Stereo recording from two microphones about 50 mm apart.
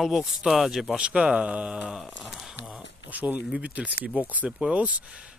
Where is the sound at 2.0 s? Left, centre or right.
Centre.